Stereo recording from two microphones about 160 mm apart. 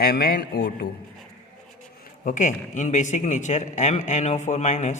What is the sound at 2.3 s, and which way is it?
A man's voice, 55° left (ahead or behind).